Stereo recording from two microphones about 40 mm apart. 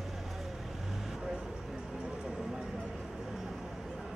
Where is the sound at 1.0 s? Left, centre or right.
Centre.